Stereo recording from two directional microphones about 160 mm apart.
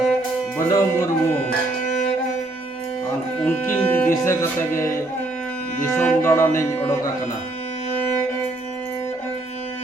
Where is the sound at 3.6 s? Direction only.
10° left (ahead or behind).